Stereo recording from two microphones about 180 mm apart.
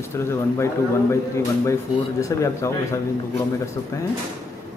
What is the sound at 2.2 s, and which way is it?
Speech, 15° left (ahead or behind).